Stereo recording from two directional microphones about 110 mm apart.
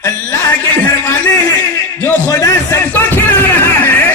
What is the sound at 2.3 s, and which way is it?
A man's voice, 30° left (ahead or behind).